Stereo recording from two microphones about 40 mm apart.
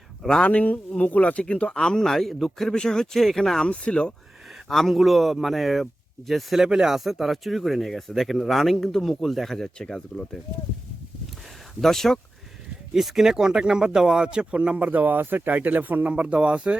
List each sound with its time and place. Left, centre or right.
0.4 s speech: left
1.5 s speech: left; by 2.7 s centre
2.7 s speech: centre
3.7 s speech: left
4.7 s speech: centre
6.6 s speech: centre
9.7 s speech: centre
11.8 s speech: centre
12.9 s speech: centre; by 14.8 s right
14.8 s speech: right
15.2 s speech: right
15.4 s speech: right